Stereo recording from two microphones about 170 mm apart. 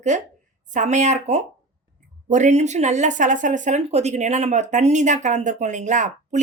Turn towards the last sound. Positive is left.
turn(degrees=-45)  # may be behind; listen again after turning